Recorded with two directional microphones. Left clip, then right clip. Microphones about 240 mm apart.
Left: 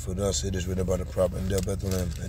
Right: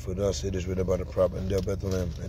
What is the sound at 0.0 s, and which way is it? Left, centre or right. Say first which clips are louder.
Speech: even; centre.